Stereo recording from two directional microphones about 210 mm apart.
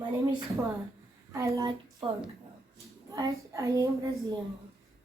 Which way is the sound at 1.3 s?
15° right (ahead or behind).